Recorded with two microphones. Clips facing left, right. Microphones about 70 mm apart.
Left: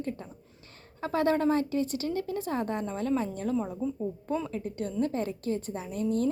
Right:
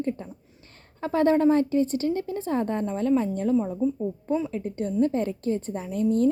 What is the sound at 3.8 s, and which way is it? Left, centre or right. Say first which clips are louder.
Speech: right 6 dB; right.